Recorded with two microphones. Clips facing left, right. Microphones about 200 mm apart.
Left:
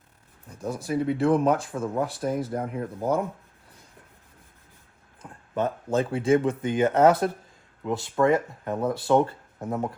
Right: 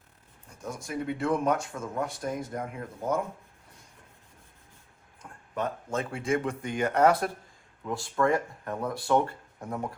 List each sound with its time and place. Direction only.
0.9 s speech: 35° left (ahead or behind)
5.2 s a sound: 15° left (ahead or behind)
5.5 s speech: 30° left (ahead or behind)